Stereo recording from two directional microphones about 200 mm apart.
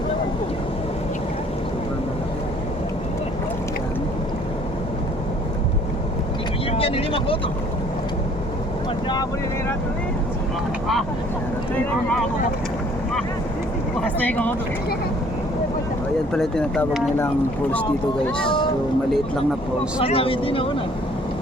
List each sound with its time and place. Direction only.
6.7 s speech: 30° left (ahead or behind)
14.0 s speech: 10° left (ahead or behind)
16.3 s speech: 5° left (ahead or behind)
18.4 s a sound: 25° left (ahead or behind)
20.0 s speech: 30° left (ahead or behind)